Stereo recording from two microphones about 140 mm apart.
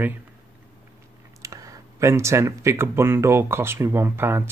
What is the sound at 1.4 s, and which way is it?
Speech, 25° right (ahead or behind).